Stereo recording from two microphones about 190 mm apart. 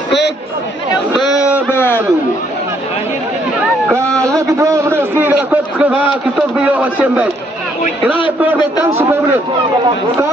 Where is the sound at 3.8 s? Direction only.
15° right (ahead or behind).